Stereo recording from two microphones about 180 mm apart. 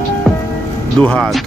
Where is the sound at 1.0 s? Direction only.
5° left (ahead or behind).